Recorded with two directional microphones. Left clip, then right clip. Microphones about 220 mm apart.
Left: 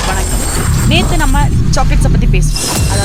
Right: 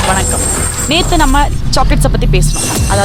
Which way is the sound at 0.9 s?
40° right (ahead or behind).